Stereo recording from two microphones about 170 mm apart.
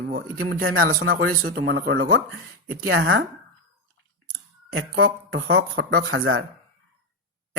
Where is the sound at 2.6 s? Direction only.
90° right.